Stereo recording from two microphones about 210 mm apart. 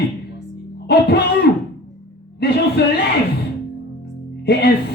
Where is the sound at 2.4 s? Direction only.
50° left (ahead or behind).